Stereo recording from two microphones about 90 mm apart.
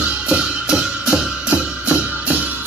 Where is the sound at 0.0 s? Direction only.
10° right (ahead or behind).